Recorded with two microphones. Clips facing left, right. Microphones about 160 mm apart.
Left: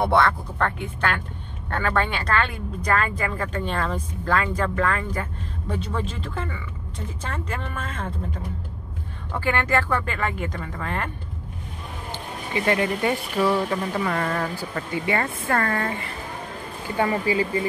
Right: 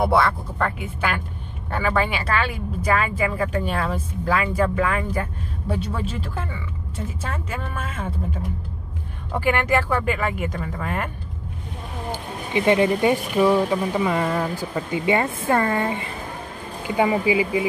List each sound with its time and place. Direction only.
0.0 s speech: 5° right (ahead or behind)
12.1 s speech: 20° right (ahead or behind)